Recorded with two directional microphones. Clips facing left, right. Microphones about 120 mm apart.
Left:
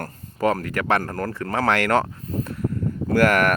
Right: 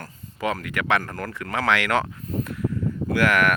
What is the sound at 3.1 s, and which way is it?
Speech, 40° left (ahead or behind).